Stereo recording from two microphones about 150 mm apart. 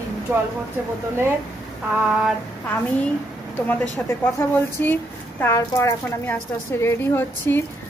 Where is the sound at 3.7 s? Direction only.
15° left (ahead or behind).